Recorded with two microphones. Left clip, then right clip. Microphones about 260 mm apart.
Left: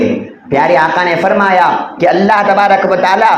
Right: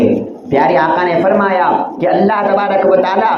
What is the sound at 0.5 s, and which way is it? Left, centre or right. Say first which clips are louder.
A man's voice: left 2 dB; left.